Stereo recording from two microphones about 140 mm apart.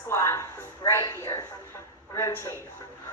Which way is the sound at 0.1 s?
20° left (ahead or behind).